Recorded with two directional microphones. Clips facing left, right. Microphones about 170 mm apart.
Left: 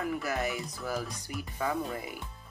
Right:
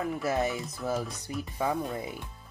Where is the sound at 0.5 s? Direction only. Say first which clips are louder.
Right 2 dB; centre (ahead or behind).